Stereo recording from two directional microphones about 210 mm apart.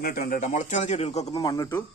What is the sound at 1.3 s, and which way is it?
Speech, 20° left (ahead or behind).